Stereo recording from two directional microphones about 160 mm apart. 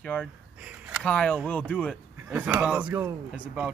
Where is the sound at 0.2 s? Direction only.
10° right (ahead or behind).